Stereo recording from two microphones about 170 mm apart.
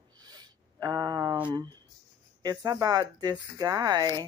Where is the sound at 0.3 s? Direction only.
25° right (ahead or behind).